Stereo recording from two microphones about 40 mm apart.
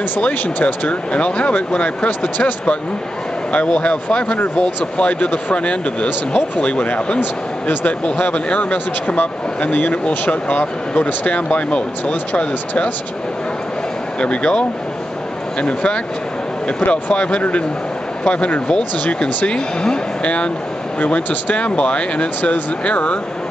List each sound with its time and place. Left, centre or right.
0.3 s speech: left
0.8 s speech: left
2.0 s speech: left
3.5 s speech: left
14.2 s speech: left
15.6 s speech: left